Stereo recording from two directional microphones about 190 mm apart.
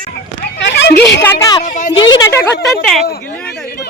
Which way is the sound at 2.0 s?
25° left (ahead or behind).